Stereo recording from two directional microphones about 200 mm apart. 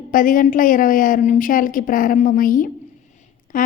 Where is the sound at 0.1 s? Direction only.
45° left (ahead or behind).